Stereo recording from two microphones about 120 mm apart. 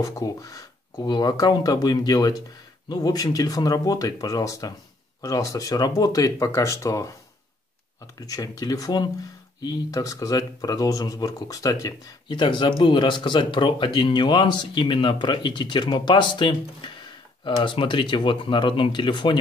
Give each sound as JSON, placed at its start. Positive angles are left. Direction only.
{"t": 0.0, "sound": "speech", "side_deg": 25}
{"t": 8.2, "sound": "speech", "side_deg": 30}
{"t": 12.3, "sound": "speech", "side_deg": 40}